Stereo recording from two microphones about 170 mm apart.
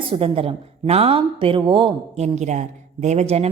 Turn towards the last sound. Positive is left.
turn(degrees=-40)  # may be behind; listen again after turning